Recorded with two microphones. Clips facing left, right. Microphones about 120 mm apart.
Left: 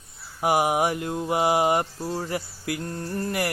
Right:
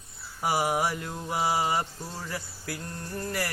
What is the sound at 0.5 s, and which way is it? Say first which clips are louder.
Mantra: left 5 dB; 15° left (ahead or behind).